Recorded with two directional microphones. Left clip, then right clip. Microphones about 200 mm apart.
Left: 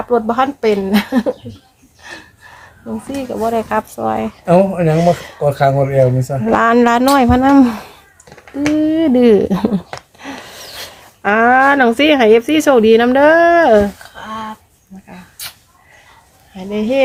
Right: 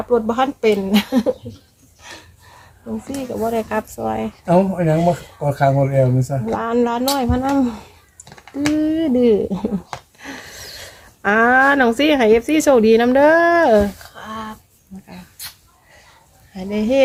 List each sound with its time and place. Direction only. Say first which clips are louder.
0.1 s speech: left 3 dB; 15° left (ahead or behind)
2.8 s speech: left 4 dB; 20° left (ahead or behind)
4.4 s speech: left 4 dB; 30° left (ahead or behind)
8.8 s speech: left 5 dB; 15° left (ahead or behind); by 9.7 s 30° left (ahead or behind)
10.2 s gasp: left 4 dB; 10° left (ahead or behind)
11.2 s speech: left 3 dB; 5° left (ahead or behind)
14.2 s a sound: left 5 dB; 15° right (ahead or behind)
16.6 s speech: left 2 dB; 15° right (ahead or behind)